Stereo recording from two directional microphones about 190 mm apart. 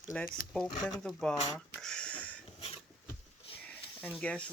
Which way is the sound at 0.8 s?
20° left (ahead or behind).